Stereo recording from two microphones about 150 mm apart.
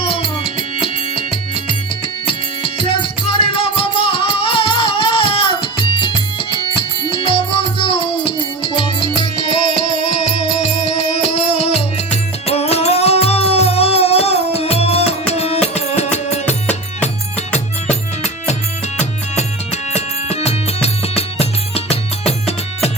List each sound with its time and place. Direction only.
0.0 s music: 40° left (ahead or behind)
11.3 s music: 40° left (ahead or behind)
17.8 s music: 45° left (ahead or behind)